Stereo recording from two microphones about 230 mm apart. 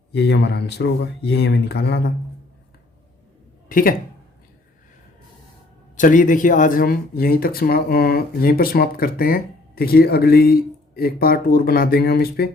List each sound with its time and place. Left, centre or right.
0.1 s speech: left
3.7 s speech: left
6.0 s speech: left